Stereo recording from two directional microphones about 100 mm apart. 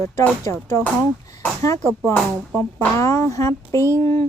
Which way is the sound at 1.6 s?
35° left (ahead or behind).